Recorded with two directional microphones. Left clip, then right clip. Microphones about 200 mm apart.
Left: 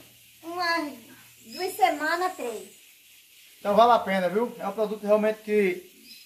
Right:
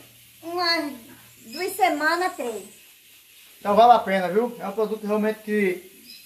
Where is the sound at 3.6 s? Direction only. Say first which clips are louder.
Right 4 dB; 30° left (ahead or behind).